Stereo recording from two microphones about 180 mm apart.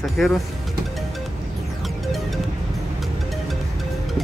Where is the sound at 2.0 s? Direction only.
Centre (ahead or behind).